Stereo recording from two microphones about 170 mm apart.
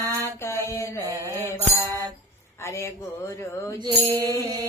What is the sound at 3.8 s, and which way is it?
Speech, 25° right (ahead or behind).